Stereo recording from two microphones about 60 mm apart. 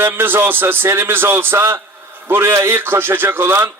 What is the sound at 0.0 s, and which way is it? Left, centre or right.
A man's voice, right.